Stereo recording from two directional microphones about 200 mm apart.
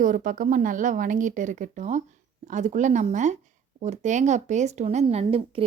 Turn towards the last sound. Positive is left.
turn(degrees=-30)  # may be behind; listen again after turning